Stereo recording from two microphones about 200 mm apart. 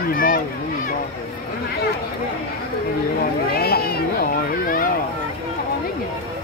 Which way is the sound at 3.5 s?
50° left (ahead or behind).